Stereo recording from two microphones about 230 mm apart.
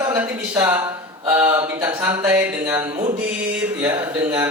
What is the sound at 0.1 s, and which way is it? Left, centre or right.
Speech, centre.